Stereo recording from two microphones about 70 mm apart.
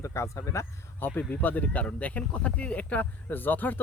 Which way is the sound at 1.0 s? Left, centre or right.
Left.